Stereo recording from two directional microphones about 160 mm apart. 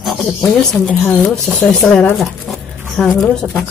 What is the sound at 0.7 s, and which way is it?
A woman's voice, 5° left (ahead or behind).